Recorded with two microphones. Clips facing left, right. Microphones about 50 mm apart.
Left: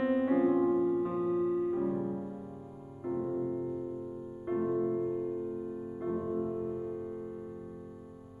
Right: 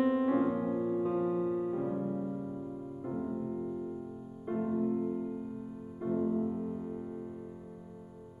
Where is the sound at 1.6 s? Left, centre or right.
Centre.